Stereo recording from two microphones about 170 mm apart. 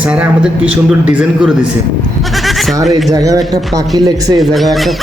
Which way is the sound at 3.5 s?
20° right (ahead or behind).